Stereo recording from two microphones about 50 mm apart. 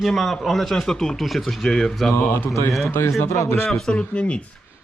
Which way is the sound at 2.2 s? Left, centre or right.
Left.